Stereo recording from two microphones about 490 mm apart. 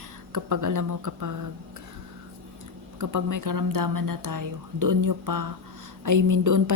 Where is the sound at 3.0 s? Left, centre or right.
Right.